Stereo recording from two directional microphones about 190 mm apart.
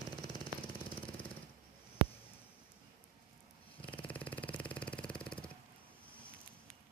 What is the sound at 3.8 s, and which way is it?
Vehicle, 10° left (ahead or behind).